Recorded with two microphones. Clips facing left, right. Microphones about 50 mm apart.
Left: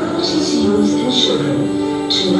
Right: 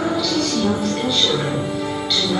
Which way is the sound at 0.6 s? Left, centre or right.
Centre.